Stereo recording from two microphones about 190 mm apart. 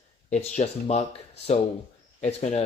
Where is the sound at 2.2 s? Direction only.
35° left (ahead or behind).